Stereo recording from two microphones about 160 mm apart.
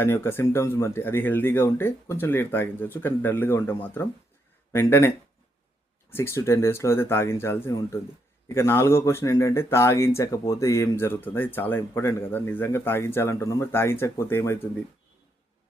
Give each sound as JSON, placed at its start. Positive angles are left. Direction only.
{"t": 0.0, "sound": "speech", "side_deg": 15}